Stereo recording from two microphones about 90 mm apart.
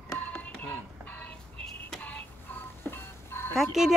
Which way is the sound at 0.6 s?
20° left (ahead or behind).